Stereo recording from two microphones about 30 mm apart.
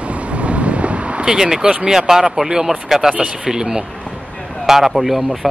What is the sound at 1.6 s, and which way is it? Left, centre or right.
Speech, right.